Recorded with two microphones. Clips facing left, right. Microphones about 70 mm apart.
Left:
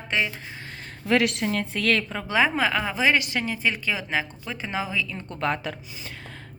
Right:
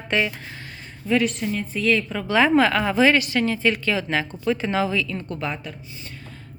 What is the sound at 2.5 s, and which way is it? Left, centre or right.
Speech, centre.